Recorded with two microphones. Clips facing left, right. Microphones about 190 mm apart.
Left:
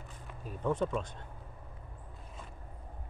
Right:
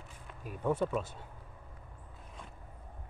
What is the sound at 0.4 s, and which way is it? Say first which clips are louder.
Speech: even; 10° right (ahead or behind).